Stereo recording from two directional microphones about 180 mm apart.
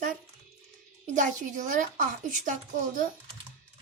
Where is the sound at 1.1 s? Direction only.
45° right (ahead or behind).